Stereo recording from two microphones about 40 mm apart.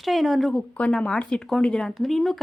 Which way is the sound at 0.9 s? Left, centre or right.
Left.